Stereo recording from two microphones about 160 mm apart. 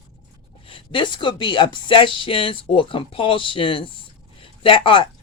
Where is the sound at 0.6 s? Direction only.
30° left (ahead or behind).